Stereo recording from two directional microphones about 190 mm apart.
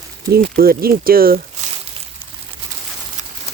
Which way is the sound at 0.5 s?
50° right (ahead or behind).